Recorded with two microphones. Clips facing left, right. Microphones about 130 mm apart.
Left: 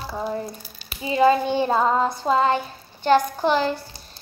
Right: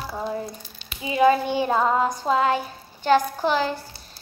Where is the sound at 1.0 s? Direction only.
10° right (ahead or behind).